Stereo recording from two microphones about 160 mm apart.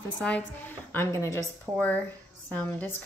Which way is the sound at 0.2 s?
5° left (ahead or behind).